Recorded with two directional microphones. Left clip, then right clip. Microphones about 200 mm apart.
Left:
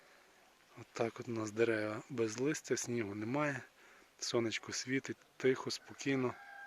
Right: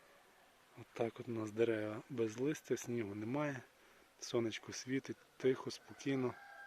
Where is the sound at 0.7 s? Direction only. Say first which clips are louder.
Left 2 dB; 5° left (ahead or behind).